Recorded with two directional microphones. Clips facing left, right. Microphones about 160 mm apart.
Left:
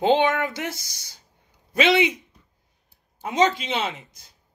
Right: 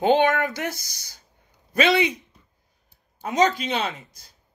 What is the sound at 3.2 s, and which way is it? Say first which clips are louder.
Speech: even; 20° left (ahead or behind).